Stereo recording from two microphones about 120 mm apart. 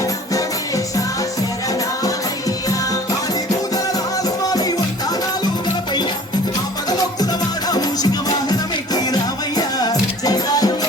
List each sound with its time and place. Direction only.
3.9 s music: 30° left (ahead or behind)
7.7 s music: 35° left (ahead or behind)